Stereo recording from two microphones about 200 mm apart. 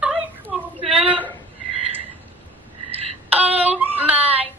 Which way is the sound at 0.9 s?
10° right (ahead or behind).